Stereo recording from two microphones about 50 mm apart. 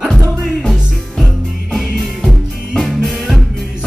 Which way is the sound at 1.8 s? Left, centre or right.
Centre.